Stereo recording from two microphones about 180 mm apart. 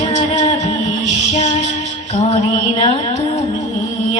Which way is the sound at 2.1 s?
40° left (ahead or behind).